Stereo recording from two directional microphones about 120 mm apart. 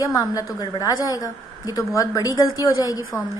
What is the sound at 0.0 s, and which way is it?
A woman's voice, 30° left (ahead or behind).